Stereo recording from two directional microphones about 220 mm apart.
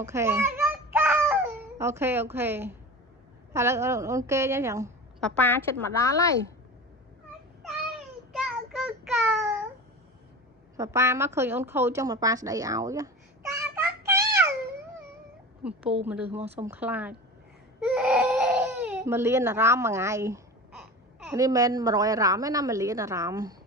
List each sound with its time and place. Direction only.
0.0 s a sound: 10° right (ahead or behind)
1.8 s a woman's voice: 10° right (ahead or behind)
5.2 s a woman's voice: 10° left (ahead or behind)
7.6 s child singing: centre (ahead or behind)
10.8 s a woman's voice: 10° right (ahead or behind)
14.0 s a sound: 15° right (ahead or behind)
15.6 s a woman's voice: 5° right (ahead or behind)
17.8 s baby cry: 5° right (ahead or behind)
21.2 s a woman's voice: 15° right (ahead or behind)